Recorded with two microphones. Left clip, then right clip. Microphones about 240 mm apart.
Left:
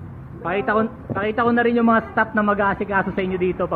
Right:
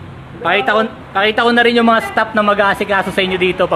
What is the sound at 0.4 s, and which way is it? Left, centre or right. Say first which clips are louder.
A man's voice: right 7 dB; right.